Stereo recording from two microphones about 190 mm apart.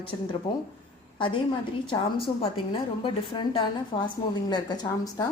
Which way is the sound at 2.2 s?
30° left (ahead or behind).